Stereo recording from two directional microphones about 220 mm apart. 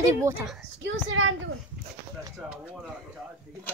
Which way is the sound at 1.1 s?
65° right (ahead or behind).